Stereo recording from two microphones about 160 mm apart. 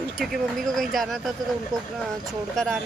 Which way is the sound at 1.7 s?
25° right (ahead or behind).